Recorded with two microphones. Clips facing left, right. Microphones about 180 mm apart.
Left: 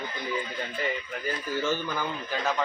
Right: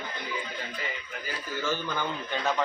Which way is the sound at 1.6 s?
15° left (ahead or behind).